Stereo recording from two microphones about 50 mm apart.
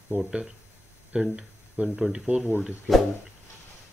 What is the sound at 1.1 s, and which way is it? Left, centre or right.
Speech, right.